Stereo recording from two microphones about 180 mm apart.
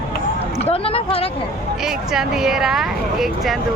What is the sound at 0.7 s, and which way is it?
Speech, 30° left (ahead or behind).